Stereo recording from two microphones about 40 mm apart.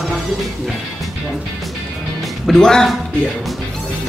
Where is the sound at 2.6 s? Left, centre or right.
Centre.